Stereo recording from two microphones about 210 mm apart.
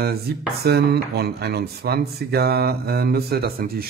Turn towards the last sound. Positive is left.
turn(degrees=-45)  # may be behind; listen again after turning